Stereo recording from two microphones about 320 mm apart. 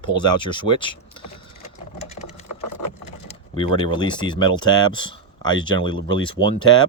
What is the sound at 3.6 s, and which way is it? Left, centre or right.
Speech, centre.